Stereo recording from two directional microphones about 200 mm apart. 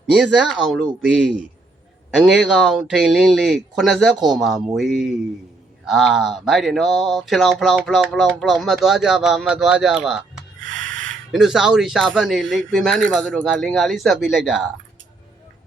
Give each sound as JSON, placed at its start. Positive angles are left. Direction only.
{"t": 0.1, "sound": "speech", "side_deg": 0}
{"t": 10.7, "sound": "a sound", "side_deg": -70}
{"t": 11.3, "sound": "speech", "side_deg": 0}